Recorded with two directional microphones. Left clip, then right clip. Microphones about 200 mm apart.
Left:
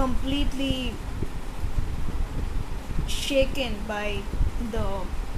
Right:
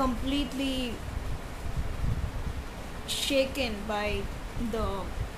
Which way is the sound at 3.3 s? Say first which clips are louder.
Left 4 dB; 45° right (ahead or behind).